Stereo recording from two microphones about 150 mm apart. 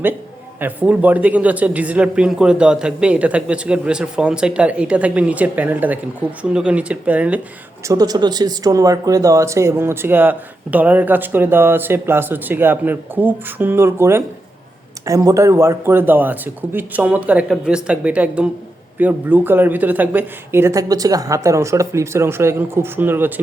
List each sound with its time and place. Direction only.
0.6 s speech: 10° right (ahead or behind)
7.9 s speech: 25° right (ahead or behind)